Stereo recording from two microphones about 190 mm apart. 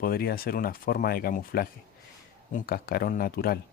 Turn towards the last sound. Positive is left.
turn(degrees=55)  # may be behind; listen again after turning